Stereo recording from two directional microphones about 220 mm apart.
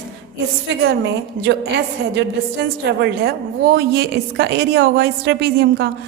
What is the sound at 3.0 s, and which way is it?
A woman's voice, 45° right (ahead or behind).